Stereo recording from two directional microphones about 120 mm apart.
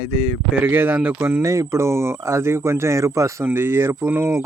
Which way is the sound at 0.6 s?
15° right (ahead or behind).